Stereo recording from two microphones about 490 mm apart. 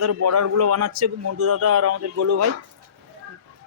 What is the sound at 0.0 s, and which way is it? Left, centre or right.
Speech, right.